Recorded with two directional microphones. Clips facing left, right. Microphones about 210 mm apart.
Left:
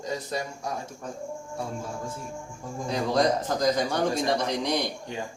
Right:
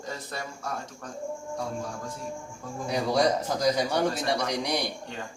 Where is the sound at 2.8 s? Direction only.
10° right (ahead or behind).